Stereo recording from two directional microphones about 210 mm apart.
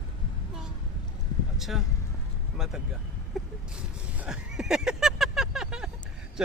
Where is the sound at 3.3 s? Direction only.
Centre (ahead or behind).